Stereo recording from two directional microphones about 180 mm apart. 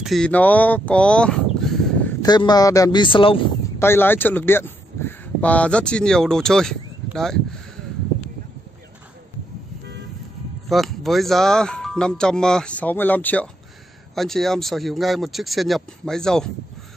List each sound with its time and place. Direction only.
0.0 s speech: centre (ahead or behind)
2.2 s speech: 25° left (ahead or behind)
3.8 s speech: 10° left (ahead or behind)
10.7 s speech: centre (ahead or behind)